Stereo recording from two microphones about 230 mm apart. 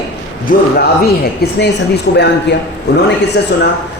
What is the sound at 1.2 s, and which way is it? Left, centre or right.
A man's voice, left.